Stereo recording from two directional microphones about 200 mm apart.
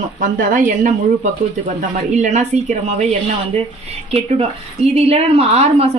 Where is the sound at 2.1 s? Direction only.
35° right (ahead or behind).